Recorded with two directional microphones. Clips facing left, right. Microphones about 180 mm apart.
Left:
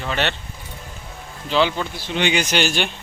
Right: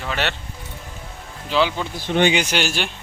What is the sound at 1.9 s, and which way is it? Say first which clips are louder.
Speech: right 5 dB; 50° right (ahead or behind).